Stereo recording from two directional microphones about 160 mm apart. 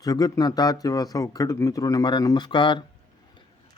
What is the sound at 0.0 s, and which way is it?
A man's voice, 25° left (ahead or behind).